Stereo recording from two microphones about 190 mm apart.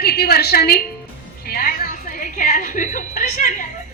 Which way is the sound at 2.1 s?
45° left (ahead or behind).